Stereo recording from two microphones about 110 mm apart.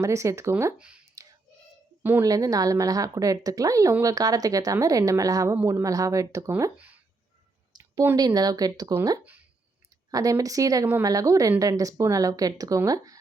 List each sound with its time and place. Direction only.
0.0 s speech: 30° right (ahead or behind)
0.8 s speech: 10° right (ahead or behind)
2.2 s speech: 30° right (ahead or behind)
6.7 s a sound: 15° right (ahead or behind)
7.7 s a sound: 35° right (ahead or behind)
8.1 s speech: 35° right (ahead or behind); by 9.4 s 20° right (ahead or behind)
10.1 s speech: 30° right (ahead or behind)